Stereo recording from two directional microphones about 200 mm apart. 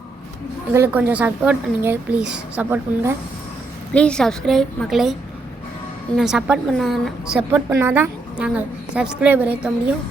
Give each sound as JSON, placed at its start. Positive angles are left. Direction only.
{"t": 0.7, "sound": "speech", "side_deg": -10}
{"t": 3.9, "sound": "a woman's voice", "side_deg": 5}
{"t": 6.1, "sound": "a woman's voice", "side_deg": -5}
{"t": 7.5, "sound": "speech", "side_deg": -15}